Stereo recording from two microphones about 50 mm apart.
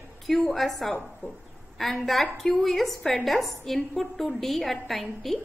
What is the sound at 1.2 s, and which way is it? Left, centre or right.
Speech, left.